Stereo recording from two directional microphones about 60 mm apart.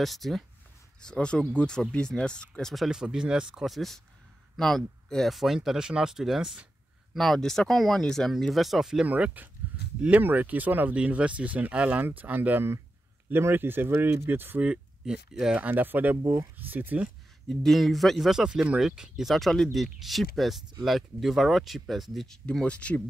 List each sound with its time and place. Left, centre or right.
0.0 s speech: centre
1.0 s speech: centre
2.9 s speech: centre
3.6 s speech: centre
7.2 s speech: centre
9.0 s speech: right
14.6 s speech: centre
15.5 s speech: right
17.5 s speech: centre
22.5 s speech: centre